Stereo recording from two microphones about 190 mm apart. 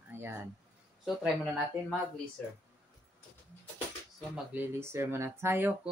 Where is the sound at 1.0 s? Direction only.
Centre (ahead or behind).